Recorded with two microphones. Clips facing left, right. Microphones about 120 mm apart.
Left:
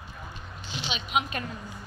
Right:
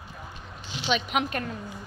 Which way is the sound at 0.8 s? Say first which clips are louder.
Right 4 dB; 60° right (ahead or behind).